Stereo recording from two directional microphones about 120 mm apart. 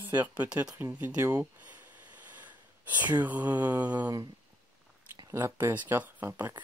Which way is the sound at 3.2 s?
15° right (ahead or behind).